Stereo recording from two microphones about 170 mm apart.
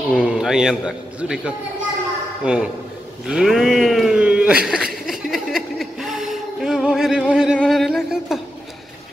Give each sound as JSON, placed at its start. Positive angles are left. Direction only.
{"t": 0.1, "sound": "speech", "side_deg": -5}
{"t": 5.0, "sound": "chuckle", "side_deg": 0}
{"t": 7.5, "sound": "a sound", "side_deg": 0}